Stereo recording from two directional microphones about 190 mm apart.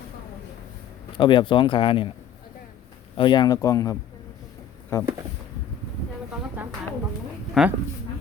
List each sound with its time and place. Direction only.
1.1 s speech: 25° left (ahead or behind)
3.2 s speech: 25° left (ahead or behind)
7.6 s speech: centre (ahead or behind)